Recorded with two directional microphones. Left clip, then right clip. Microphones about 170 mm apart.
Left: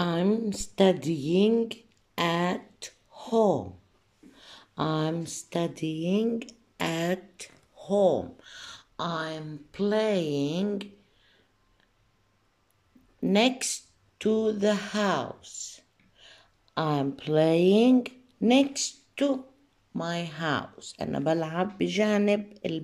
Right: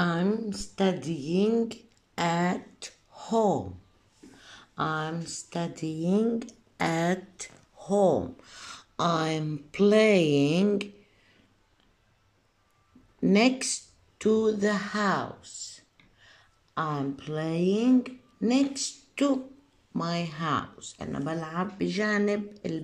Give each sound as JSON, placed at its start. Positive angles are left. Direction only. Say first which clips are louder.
{"t": 0.1, "sound": "a woman's voice", "louder": "left 2 dB", "side_deg": 15}
{"t": 1.0, "sound": "speech", "louder": "left 4 dB", "side_deg": 90}
{"t": 1.3, "sound": "speech", "louder": "left 2 dB", "side_deg": 15}
{"t": 2.3, "sound": "a sound", "louder": "even", "side_deg": 5}
{"t": 5.5, "sound": "speech", "louder": "left 4 dB", "side_deg": 15}
{"t": 13.2, "sound": "speech", "louder": "right 1 dB", "side_deg": 0}